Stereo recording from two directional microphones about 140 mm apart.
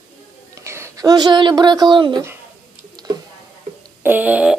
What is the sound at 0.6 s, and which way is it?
Speech, 20° right (ahead or behind).